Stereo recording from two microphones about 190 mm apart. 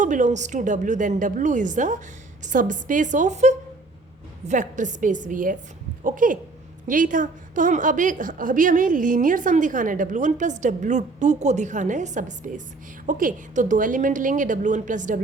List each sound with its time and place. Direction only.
0.0 s a woman's voice: 40° right (ahead or behind)